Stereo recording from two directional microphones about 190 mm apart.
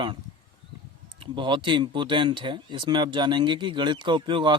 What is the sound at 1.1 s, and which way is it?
Speech, 25° right (ahead or behind).